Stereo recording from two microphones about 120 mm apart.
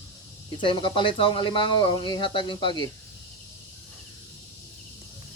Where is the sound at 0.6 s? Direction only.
45° left (ahead or behind).